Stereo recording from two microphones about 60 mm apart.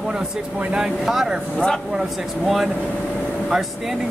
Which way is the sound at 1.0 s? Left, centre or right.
Centre.